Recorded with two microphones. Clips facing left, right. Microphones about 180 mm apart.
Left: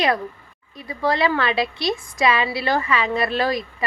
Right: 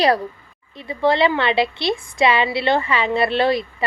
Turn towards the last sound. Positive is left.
turn(degrees=-30)  # may be behind; listen again after turning